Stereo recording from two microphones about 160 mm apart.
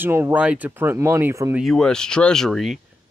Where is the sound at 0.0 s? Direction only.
15° right (ahead or behind).